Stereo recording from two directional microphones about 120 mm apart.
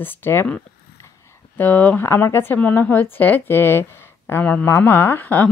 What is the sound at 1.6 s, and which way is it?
A woman's voice, 15° left (ahead or behind).